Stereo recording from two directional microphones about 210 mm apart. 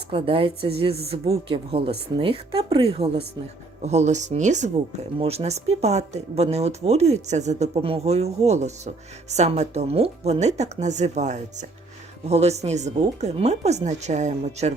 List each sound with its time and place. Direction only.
0.1 s speech: 25° right (ahead or behind)